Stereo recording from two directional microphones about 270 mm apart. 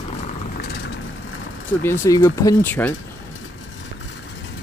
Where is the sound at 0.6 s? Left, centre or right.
Left.